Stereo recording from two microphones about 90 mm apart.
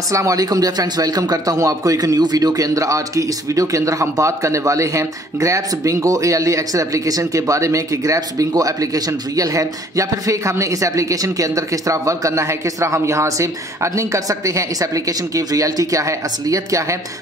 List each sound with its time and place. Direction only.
0.1 s speech: 40° right (ahead or behind)